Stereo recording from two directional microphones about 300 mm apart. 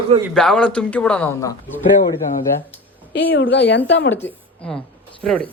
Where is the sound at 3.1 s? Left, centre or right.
Left.